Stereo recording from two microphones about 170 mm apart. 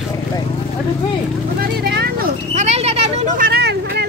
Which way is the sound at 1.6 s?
65° right (ahead or behind).